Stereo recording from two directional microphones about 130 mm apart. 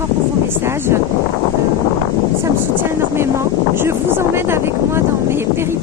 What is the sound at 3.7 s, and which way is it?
Vehicle, 15° right (ahead or behind).